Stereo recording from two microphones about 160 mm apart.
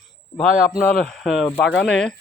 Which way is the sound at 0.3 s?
Centre (ahead or behind).